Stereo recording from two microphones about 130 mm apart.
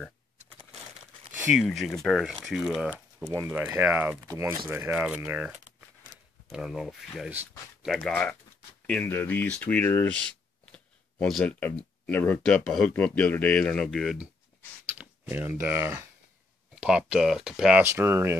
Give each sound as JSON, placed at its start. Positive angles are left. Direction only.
{"t": 1.7, "sound": "speech", "side_deg": 0}
{"t": 3.3, "sound": "speech", "side_deg": -25}
{"t": 3.6, "sound": "speech", "side_deg": -10}
{"t": 10.6, "sound": "a sound", "side_deg": 10}
{"t": 11.6, "sound": "speech", "side_deg": 15}
{"t": 15.0, "sound": "speech", "side_deg": -15}
{"t": 17.8, "sound": "speech", "side_deg": -20}